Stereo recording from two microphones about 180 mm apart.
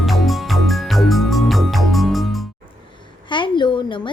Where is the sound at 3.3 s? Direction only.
25° left (ahead or behind).